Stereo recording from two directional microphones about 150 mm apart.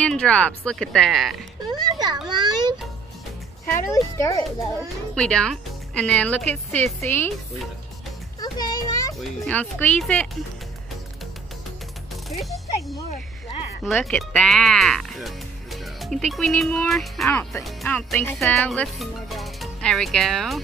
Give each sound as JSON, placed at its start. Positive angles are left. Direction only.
{"t": 0.0, "sound": "speech", "side_deg": 5}
{"t": 1.7, "sound": "children playing", "side_deg": -25}
{"t": 2.2, "sound": "a child's voice", "side_deg": -30}
{"t": 3.9, "sound": "a child's voice", "side_deg": 20}
{"t": 5.1, "sound": "speech", "side_deg": 5}
{"t": 8.4, "sound": "children playing", "side_deg": 25}
{"t": 9.2, "sound": "speech", "side_deg": 10}
{"t": 12.3, "sound": "speech", "side_deg": 0}
{"t": 14.0, "sound": "speech", "side_deg": 5}
{"t": 17.3, "sound": "speech", "side_deg": 15}